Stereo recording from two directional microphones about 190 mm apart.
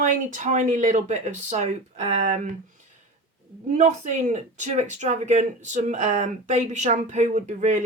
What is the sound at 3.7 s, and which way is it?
Speech, 40° right (ahead or behind).